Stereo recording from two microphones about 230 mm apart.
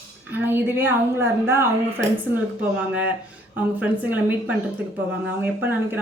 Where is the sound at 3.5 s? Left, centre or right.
Centre.